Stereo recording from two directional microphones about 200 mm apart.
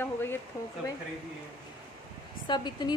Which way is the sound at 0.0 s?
10° left (ahead or behind).